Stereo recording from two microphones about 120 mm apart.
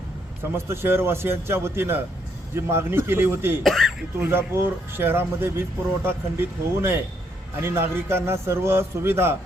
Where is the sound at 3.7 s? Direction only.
Centre (ahead or behind).